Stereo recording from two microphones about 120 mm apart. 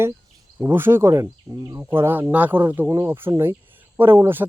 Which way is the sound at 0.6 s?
20° right (ahead or behind).